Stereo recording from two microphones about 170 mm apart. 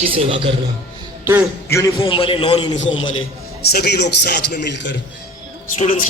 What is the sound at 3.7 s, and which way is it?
Speech, 75° left (ahead or behind).